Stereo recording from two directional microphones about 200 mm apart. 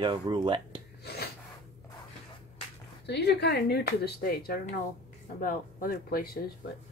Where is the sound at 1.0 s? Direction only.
55° left (ahead or behind).